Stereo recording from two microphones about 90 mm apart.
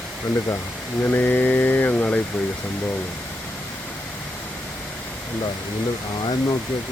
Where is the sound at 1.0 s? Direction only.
20° left (ahead or behind).